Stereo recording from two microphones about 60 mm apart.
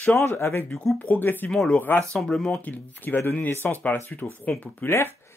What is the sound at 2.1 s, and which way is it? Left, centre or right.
Speech, centre.